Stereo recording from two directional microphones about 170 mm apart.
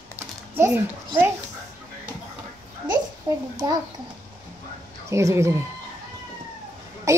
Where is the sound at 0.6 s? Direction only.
15° right (ahead or behind).